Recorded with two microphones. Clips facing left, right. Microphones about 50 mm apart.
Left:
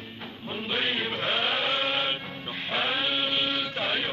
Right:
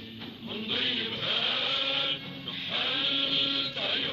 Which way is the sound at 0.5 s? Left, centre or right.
Left.